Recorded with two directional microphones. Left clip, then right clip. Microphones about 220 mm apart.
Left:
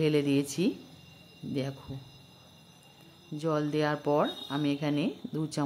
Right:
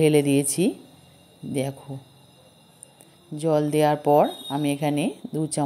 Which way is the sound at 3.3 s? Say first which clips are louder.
Right 8 dB; 15° right (ahead or behind).